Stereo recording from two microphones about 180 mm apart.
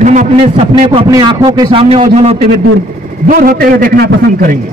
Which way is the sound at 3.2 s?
50° right (ahead or behind).